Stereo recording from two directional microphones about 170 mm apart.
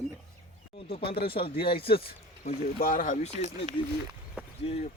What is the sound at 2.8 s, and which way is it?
Speech, 55° left (ahead or behind).